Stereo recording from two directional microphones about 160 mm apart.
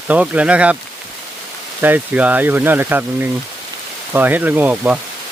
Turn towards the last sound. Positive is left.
turn(degrees=-10)  # may be behind; listen again after turning